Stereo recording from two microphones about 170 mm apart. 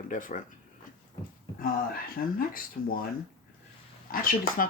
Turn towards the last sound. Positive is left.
turn(degrees=55)  # may be behind; listen again after turning